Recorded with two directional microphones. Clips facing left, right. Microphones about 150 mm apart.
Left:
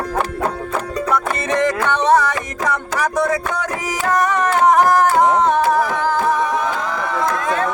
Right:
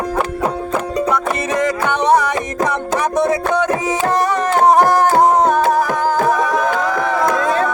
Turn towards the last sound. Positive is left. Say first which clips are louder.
# right 3 dB
turn(degrees=-45)  # may be behind; listen again after turning